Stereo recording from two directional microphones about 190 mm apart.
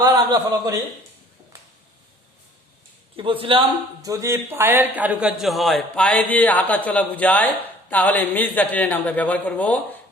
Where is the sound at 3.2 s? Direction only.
25° right (ahead or behind).